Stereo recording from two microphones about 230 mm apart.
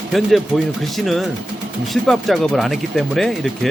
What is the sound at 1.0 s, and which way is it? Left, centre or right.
Speech, centre.